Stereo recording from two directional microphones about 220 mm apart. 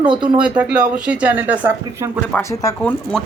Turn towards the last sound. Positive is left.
turn(degrees=0)  # may be behind; listen again after turning